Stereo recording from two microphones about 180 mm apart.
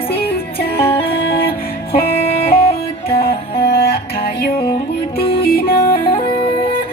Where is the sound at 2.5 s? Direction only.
55° left (ahead or behind).